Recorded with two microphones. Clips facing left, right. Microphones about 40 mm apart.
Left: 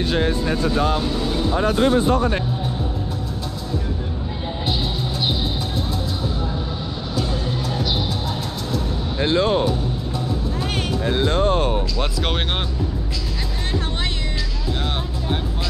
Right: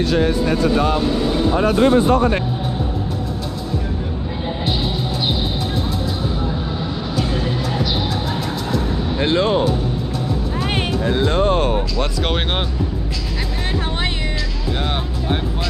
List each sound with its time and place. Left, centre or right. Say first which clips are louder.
0.0 s speech: right 3 dB; left
0.9 s speech: right 4 dB; centre
1.6 s speech: right 3 dB; right
9.2 s music: right 1 dB; right
11.1 s music: right 2 dB; right